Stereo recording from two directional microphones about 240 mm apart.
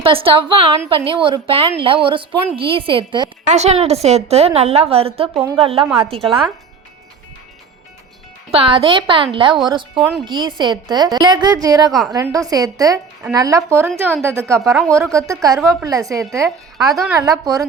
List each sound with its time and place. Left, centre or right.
0.0 s a woman's voice: right
5.3 s a woman's voice: centre
5.5 s a woman's voice: right
8.4 s a woman's voice: right
11.9 s speech: centre
12.1 s a woman's voice: centre
14.6 s speech: centre
14.9 s a woman's voice: centre
16.9 s speech: centre